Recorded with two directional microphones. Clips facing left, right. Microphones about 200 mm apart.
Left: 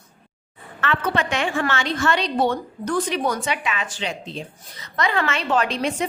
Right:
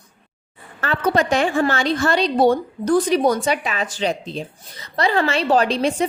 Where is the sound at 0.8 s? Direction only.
40° right (ahead or behind).